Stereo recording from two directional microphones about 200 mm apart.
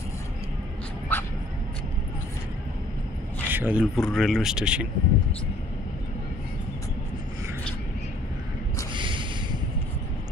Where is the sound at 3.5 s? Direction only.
10° right (ahead or behind).